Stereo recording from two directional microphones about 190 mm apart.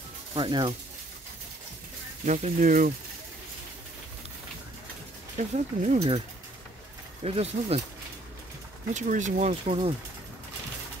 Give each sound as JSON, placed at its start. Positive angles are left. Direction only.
{"t": 0.3, "sound": "speech", "side_deg": -25}
{"t": 2.2, "sound": "speech", "side_deg": -40}
{"t": 5.4, "sound": "speech", "side_deg": -40}
{"t": 7.2, "sound": "speech", "side_deg": -30}
{"t": 8.9, "sound": "speech", "side_deg": -40}